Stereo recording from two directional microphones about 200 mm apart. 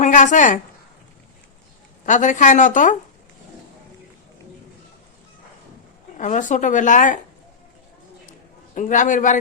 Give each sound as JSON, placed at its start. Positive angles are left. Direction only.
{"t": 0.0, "sound": "a woman's voice", "side_deg": 40}
{"t": 2.0, "sound": "speech", "side_deg": 40}
{"t": 6.1, "sound": "speech", "side_deg": 40}
{"t": 8.3, "sound": "a sound", "side_deg": 40}